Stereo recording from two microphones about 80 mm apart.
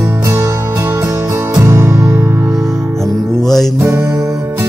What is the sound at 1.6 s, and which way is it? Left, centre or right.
Music, right.